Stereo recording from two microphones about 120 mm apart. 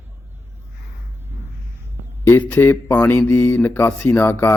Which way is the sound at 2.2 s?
15° left (ahead or behind).